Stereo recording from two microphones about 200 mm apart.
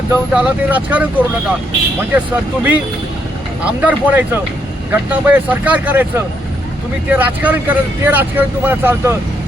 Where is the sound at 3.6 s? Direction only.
5° right (ahead or behind).